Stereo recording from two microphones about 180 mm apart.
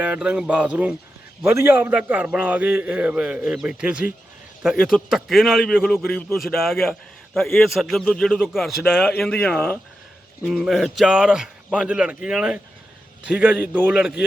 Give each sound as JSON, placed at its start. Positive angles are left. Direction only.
{"t": 0.0, "sound": "a man's voice", "side_deg": -5}